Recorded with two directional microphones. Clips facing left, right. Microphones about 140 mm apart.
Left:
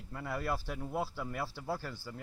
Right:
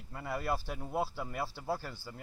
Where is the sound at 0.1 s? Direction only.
10° right (ahead or behind).